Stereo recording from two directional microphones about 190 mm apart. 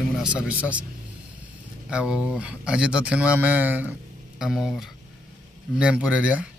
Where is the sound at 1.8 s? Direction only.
5° right (ahead or behind).